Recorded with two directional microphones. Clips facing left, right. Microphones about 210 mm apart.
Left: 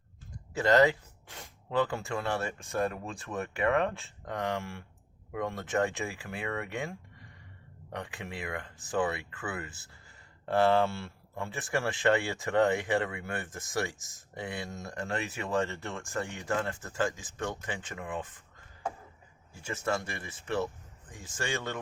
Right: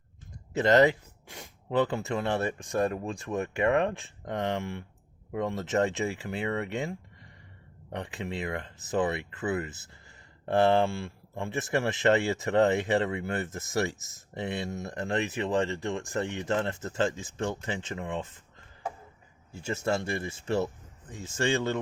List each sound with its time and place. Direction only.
0.5 s speech: 20° right (ahead or behind)
19.6 s speech: 25° right (ahead or behind)